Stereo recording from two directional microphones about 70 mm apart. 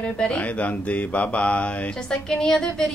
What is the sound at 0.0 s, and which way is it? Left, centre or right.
A woman's voice, centre.